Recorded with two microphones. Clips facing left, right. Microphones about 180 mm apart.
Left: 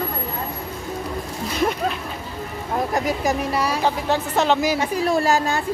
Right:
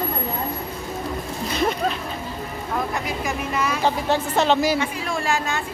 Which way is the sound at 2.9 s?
40° left (ahead or behind).